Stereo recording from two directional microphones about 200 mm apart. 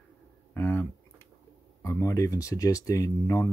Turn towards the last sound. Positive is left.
turn(degrees=15)  # may be behind; listen again after turning